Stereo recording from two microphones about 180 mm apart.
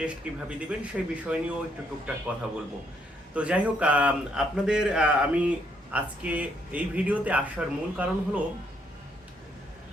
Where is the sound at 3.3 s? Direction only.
5° right (ahead or behind).